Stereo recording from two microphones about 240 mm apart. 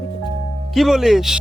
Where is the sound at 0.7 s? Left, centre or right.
Centre.